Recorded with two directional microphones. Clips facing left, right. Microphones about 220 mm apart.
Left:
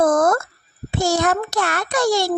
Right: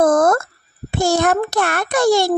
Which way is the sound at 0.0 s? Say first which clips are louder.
Right 2 dB; 50° right (ahead or behind).